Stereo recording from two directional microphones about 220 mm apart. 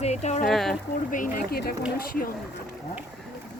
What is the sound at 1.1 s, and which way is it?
Speech, 35° left (ahead or behind).